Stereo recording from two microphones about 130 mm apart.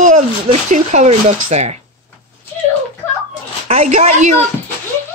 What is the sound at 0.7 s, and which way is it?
Speech, 65° right (ahead or behind).